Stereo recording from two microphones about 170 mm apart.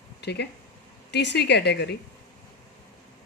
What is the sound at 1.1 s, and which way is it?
Speech, 90° left.